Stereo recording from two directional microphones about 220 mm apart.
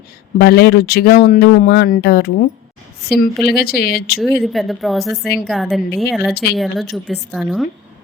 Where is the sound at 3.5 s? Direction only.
45° left (ahead or behind).